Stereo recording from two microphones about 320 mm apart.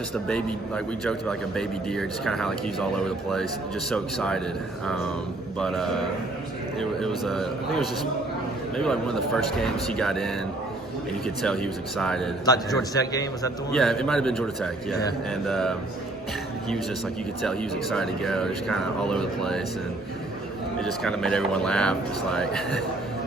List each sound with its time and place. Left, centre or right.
0.1 s a man's voice: centre
5.5 s a man's voice: centre
11.4 s a man's voice: centre
17.4 s a man's voice: centre
20.7 s a man's voice: centre